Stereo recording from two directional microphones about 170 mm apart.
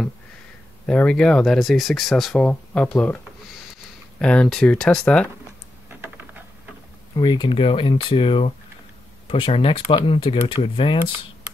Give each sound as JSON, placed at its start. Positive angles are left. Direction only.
{"t": 0.8, "sound": "speech", "side_deg": 5}
{"t": 4.2, "sound": "speech", "side_deg": 5}
{"t": 5.9, "sound": "a sound", "side_deg": -10}
{"t": 7.2, "sound": "speech", "side_deg": 25}